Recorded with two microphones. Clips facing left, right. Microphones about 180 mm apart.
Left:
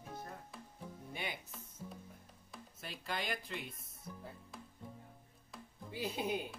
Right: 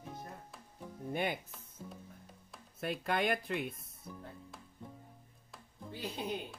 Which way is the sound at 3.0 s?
60° right (ahead or behind).